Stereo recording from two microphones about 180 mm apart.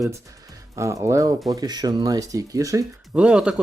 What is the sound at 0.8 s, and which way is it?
Speech, 15° right (ahead or behind).